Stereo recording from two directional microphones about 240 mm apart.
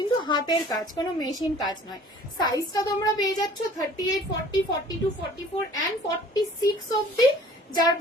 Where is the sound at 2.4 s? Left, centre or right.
Centre.